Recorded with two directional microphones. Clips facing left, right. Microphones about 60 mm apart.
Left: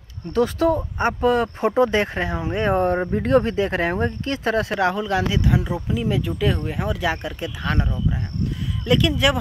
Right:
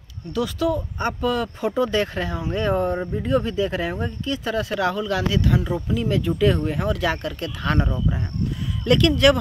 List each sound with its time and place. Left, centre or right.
0.3 s speech: left
2.8 s speech: left
3.4 s speech: left
5.4 s speech: centre
7.6 s speech: centre